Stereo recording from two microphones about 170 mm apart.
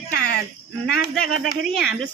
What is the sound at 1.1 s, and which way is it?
Speech, centre (ahead or behind).